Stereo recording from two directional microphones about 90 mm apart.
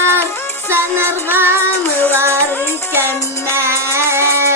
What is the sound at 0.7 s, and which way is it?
Music, 25° right (ahead or behind).